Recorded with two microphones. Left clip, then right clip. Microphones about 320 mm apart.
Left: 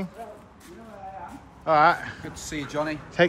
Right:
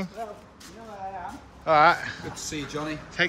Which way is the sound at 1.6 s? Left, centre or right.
Centre.